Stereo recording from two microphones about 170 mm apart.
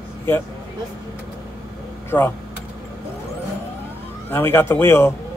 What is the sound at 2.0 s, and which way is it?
Speech, 15° left (ahead or behind).